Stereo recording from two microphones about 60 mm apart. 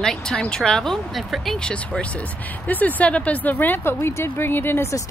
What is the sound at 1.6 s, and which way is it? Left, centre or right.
Speech, centre.